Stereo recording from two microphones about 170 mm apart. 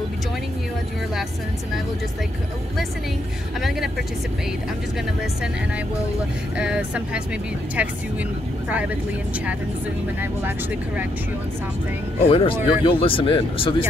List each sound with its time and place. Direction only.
8.6 s speech: 10° right (ahead or behind)
12.2 s speech: 35° left (ahead or behind)